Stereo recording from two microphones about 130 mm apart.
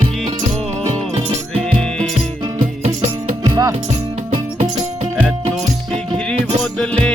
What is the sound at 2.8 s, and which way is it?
Music, 55° right (ahead or behind).